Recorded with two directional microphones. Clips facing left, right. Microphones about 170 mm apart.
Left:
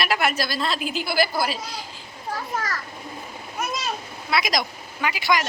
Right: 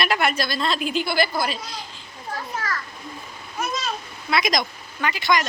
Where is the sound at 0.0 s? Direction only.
5° left (ahead or behind).